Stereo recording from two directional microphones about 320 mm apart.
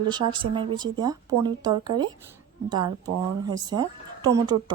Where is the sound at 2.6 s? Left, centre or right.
Centre.